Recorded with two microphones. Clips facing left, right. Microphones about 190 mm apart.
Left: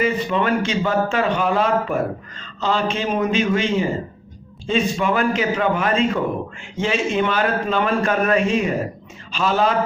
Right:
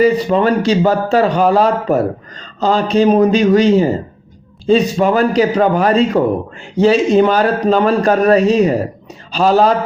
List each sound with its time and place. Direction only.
0.0 s speech: 35° right (ahead or behind)